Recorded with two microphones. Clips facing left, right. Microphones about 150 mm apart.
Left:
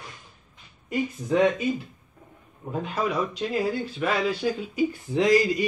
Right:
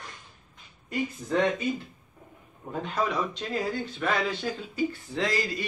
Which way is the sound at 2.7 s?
10° left (ahead or behind).